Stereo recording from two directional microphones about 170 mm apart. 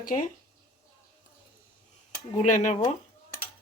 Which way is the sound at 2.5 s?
45° left (ahead or behind).